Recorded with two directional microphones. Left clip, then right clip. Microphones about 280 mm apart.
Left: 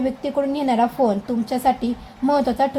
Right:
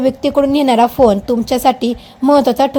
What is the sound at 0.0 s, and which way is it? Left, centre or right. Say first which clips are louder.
A woman's voice: right 9 dB; right.